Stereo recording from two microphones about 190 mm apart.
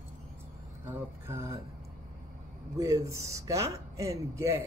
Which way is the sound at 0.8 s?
10° right (ahead or behind).